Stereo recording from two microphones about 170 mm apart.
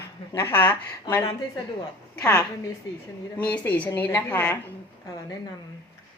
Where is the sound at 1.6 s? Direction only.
30° left (ahead or behind).